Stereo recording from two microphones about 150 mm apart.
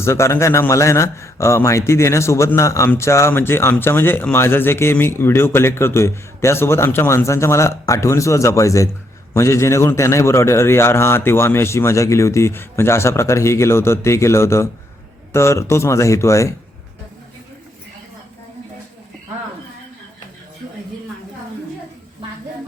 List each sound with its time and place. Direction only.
0.0 s a man's voice: 20° left (ahead or behind)